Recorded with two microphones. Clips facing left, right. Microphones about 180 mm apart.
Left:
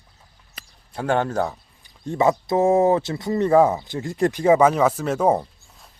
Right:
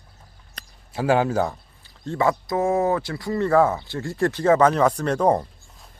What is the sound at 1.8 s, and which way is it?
Speech, 15° left (ahead or behind).